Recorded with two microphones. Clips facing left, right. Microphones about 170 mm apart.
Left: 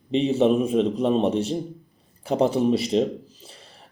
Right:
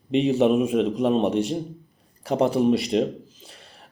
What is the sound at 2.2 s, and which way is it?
Speech, 30° left (ahead or behind).